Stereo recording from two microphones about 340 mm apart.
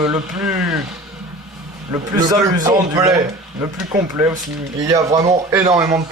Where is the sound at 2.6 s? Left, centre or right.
Centre.